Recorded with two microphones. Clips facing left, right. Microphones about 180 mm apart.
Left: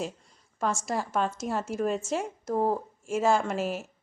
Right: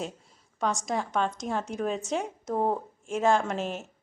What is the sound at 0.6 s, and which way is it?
A woman's voice, centre (ahead or behind).